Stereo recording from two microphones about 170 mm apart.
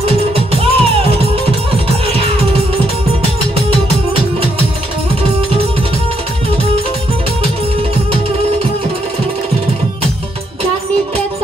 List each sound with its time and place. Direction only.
0.0 s music: 35° right (ahead or behind)
4.1 s music: 35° right (ahead or behind)